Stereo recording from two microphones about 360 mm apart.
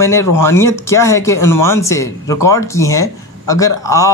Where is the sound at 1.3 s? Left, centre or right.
Left.